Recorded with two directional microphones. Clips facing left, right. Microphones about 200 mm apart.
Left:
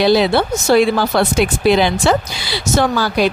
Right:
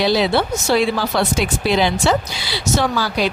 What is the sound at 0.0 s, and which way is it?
Speech, 55° left (ahead or behind).